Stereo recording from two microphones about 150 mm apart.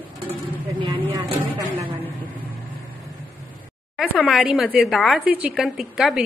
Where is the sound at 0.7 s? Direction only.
30° right (ahead or behind).